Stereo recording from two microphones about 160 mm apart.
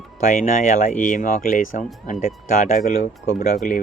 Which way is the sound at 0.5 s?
55° left (ahead or behind).